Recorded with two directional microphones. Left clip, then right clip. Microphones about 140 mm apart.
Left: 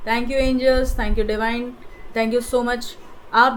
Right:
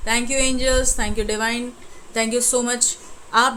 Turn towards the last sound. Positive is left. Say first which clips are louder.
# left 2 dB
turn(degrees=-5)  # may be behind; listen again after turning